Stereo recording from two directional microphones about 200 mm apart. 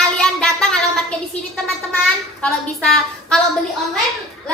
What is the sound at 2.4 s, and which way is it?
A woman's voice, 5° left (ahead or behind).